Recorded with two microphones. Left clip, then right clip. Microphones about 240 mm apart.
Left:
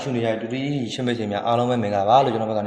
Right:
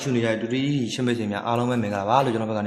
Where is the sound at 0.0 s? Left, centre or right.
Centre.